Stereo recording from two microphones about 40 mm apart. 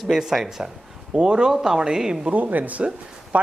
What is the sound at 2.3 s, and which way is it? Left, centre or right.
Speech, right.